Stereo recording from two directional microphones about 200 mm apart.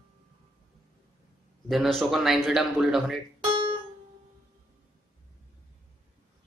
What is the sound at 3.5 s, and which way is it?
Music, 25° right (ahead or behind).